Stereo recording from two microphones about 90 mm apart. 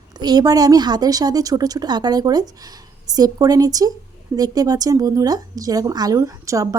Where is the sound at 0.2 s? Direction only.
50° right (ahead or behind).